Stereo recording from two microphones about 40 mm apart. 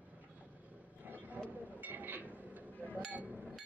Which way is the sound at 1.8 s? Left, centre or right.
Right.